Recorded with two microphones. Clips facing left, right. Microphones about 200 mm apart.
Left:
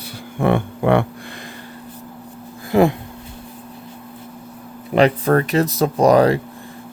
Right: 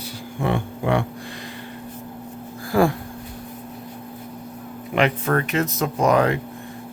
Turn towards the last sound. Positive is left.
turn(degrees=35)  # may be behind; listen again after turning